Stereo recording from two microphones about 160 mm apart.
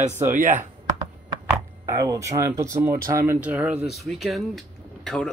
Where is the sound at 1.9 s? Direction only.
20° right (ahead or behind).